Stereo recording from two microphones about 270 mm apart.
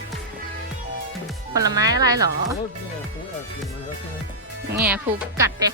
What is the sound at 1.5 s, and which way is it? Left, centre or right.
Speech, centre.